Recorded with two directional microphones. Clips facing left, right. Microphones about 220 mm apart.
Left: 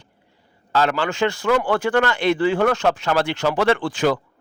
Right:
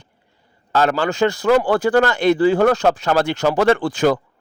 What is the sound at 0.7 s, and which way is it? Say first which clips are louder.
A man's voice: right 3 dB; 45° right (ahead or behind).